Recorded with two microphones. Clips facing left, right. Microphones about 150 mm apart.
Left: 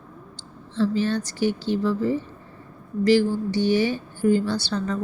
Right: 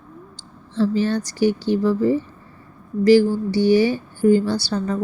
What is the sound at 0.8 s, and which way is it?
A woman's voice, 40° right (ahead or behind).